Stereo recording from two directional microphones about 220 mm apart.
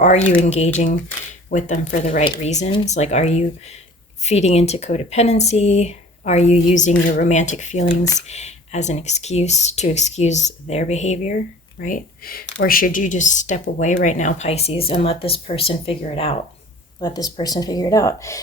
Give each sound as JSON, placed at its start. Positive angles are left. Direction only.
{"t": 0.0, "sound": "a woman's voice", "side_deg": 30}